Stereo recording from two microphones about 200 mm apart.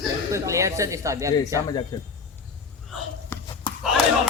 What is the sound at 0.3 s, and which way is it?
A man's voice, 15° right (ahead or behind).